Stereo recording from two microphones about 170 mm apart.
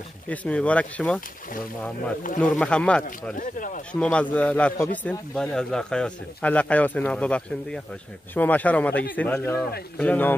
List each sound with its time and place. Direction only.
0.3 s speech: 10° left (ahead or behind)
3.3 s speech: 50° left (ahead or behind)
3.9 s speech: 5° left (ahead or behind)